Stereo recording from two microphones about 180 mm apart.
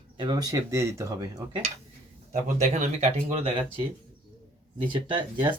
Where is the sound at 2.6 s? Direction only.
40° right (ahead or behind).